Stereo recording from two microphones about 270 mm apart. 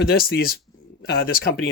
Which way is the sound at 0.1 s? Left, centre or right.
Left.